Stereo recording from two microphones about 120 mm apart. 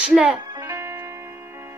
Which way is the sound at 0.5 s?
30° right (ahead or behind).